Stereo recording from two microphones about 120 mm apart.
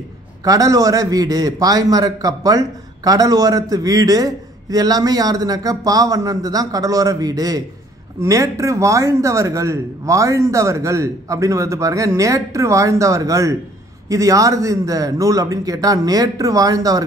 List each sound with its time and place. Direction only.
0.4 s a man's voice: 30° right (ahead or behind)